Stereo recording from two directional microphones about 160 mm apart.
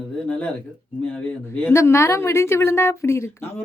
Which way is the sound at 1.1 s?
10° left (ahead or behind).